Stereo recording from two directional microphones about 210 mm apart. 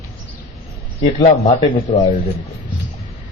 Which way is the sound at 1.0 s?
35° left (ahead or behind).